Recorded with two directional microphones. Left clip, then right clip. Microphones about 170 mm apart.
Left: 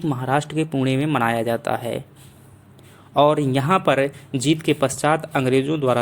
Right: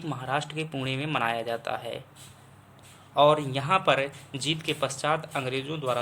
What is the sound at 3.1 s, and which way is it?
Speech, 40° left (ahead or behind).